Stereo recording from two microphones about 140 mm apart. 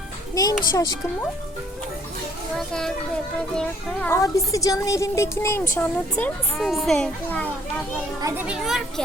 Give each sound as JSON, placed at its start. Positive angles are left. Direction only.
{"t": 0.4, "sound": "speech", "side_deg": 25}
{"t": 2.6, "sound": "a child's voice", "side_deg": 5}
{"t": 4.1, "sound": "speech", "side_deg": 20}
{"t": 6.6, "sound": "a child's voice", "side_deg": 0}
{"t": 8.2, "sound": "a child's voice", "side_deg": -20}
{"t": 8.4, "sound": "a child's voice", "side_deg": -5}